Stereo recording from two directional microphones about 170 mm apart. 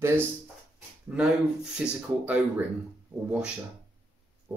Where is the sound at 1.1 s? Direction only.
5° right (ahead or behind).